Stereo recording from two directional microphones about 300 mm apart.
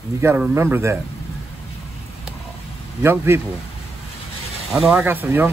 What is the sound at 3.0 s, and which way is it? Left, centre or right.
Speech, centre.